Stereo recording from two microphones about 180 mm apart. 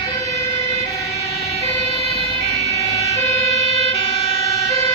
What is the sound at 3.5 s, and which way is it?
Emergency vehicle, 35° right (ahead or behind).